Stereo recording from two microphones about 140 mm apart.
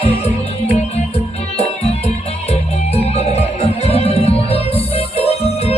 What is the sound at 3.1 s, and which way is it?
Music, 45° left (ahead or behind).